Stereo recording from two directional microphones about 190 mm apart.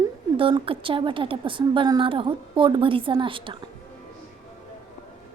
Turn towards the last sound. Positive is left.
turn(degrees=-25)  # may be behind; listen again after turning